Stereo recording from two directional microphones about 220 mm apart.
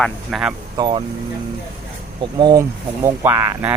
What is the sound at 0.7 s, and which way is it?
Speech, 20° right (ahead or behind).